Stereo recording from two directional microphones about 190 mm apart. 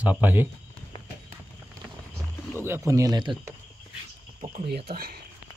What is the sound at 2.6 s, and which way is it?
Speech, 15° right (ahead or behind).